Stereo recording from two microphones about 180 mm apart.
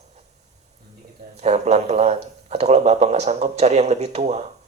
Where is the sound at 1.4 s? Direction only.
40° right (ahead or behind).